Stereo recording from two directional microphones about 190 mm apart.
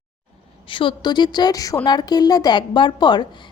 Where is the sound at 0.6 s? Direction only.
25° left (ahead or behind).